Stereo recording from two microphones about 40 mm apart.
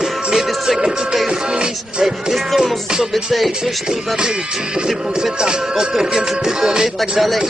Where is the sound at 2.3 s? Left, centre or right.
Centre.